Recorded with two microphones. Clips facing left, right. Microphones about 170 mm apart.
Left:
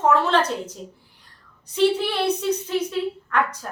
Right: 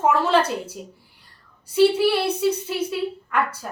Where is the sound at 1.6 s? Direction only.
10° right (ahead or behind).